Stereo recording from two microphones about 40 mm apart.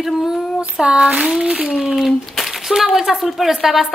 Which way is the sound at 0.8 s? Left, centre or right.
Right.